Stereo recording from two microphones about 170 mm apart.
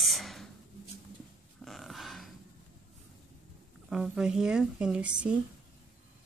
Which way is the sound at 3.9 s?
5° right (ahead or behind).